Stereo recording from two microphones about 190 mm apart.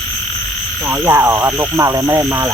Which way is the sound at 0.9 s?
10° right (ahead or behind).